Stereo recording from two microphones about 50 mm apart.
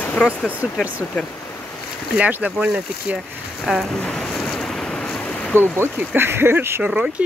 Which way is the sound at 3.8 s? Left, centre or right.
Centre.